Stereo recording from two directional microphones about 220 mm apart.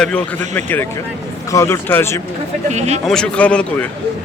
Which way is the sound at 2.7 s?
30° right (ahead or behind).